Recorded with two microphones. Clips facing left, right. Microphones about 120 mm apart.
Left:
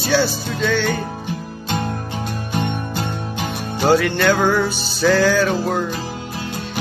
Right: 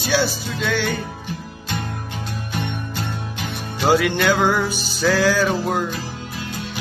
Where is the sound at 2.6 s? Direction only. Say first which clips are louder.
Left 5 dB; 50° left (ahead or behind).